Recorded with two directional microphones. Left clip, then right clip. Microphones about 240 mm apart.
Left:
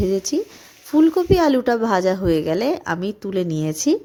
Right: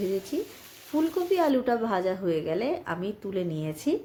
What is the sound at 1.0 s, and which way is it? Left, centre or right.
A woman's voice, left.